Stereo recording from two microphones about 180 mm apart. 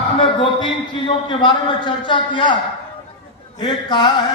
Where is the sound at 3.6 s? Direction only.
25° left (ahead or behind).